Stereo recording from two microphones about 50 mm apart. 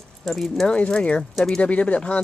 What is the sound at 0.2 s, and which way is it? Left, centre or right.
Speech, centre.